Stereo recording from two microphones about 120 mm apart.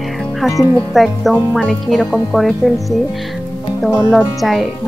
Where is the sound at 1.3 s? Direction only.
10° left (ahead or behind).